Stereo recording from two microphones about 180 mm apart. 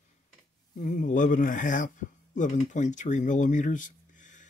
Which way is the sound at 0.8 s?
45° left (ahead or behind).